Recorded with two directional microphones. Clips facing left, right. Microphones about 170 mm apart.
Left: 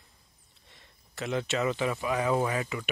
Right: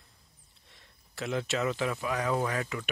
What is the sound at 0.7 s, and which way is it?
Speech, centre (ahead or behind).